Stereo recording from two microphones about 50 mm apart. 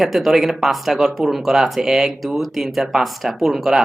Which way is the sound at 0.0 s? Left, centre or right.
Centre.